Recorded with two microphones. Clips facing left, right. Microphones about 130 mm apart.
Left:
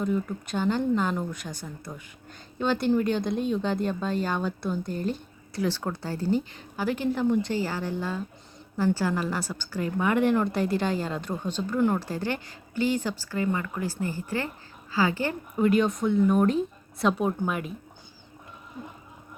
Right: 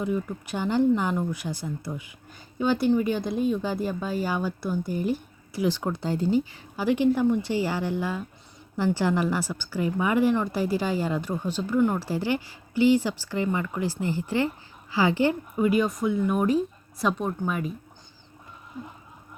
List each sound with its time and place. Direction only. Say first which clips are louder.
0.0 s speech: even; 10° right (ahead or behind)
15.5 s speech: left 5 dB; 5° right (ahead or behind)